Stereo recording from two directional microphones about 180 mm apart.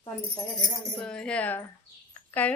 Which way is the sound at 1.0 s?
5° left (ahead or behind).